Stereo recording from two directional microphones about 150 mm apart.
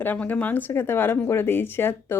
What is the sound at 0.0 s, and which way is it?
Speech, 10° left (ahead or behind).